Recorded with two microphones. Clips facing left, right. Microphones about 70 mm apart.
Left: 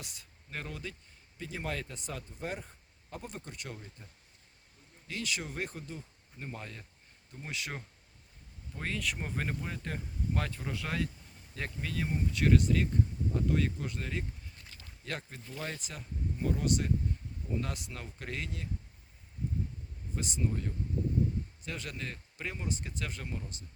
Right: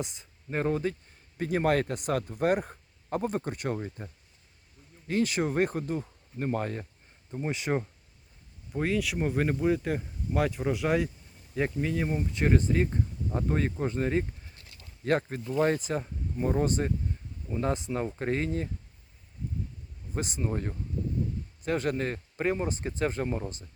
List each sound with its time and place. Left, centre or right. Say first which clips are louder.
0.0 s speech: right 13 dB; right
0.6 s speech: right 16 dB; right
1.4 s speech: right 12 dB; right
5.0 s speech: right 11 dB; right
7.4 s speech: right 11 dB; right
8.7 s speech: right 8 dB; centre; by 18.7 s right
20.1 s speech: right 4 dB; right